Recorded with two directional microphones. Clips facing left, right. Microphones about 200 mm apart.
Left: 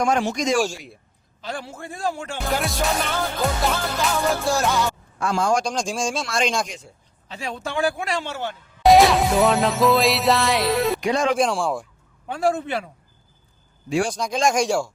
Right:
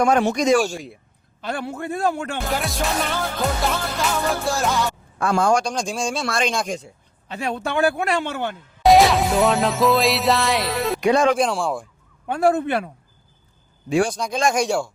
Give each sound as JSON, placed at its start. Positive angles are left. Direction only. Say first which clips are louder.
{"t": 0.0, "sound": "speech", "louder": "right 4 dB", "side_deg": -60}
{"t": 2.5, "sound": "music", "louder": "left 3 dB", "side_deg": 0}
{"t": 5.2, "sound": "speech", "louder": "right 3 dB", "side_deg": -60}
{"t": 5.6, "sound": "music", "louder": "even", "side_deg": -5}
{"t": 7.3, "sound": "speech", "louder": "right 5 dB", "side_deg": -60}
{"t": 8.8, "sound": "music", "louder": "even", "side_deg": 0}
{"t": 11.0, "sound": "speech", "louder": "right 4 dB", "side_deg": -65}
{"t": 11.3, "sound": "music", "louder": "even", "side_deg": 0}
{"t": 12.3, "sound": "speech", "louder": "right 4 dB", "side_deg": -55}
{"t": 14.1, "sound": "music", "louder": "even", "side_deg": -5}